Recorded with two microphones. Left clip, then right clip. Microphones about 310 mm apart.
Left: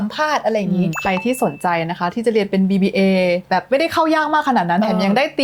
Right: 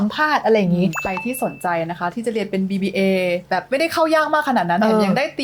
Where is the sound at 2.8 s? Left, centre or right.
Left.